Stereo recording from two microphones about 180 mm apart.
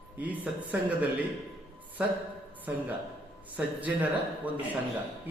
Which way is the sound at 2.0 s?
5° right (ahead or behind).